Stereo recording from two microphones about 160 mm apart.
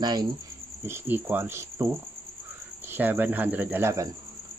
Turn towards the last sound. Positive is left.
turn(degrees=-20)  # may be behind; listen again after turning